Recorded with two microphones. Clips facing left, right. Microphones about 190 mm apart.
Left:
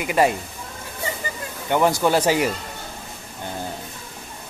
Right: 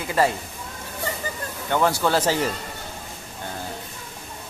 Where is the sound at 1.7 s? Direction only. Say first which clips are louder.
Left 3 dB; 15° left (ahead or behind).